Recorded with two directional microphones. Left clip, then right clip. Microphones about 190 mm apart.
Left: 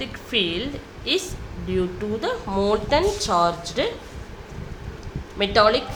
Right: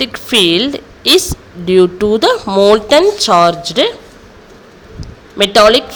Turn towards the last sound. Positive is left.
turn(degrees=-45)  # may be behind; listen again after turning